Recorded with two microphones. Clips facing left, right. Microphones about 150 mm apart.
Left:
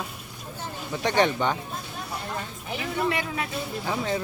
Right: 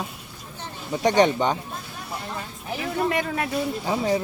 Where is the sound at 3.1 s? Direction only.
45° right (ahead or behind).